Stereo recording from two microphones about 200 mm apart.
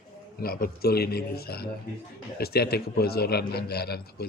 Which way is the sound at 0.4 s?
50° left (ahead or behind).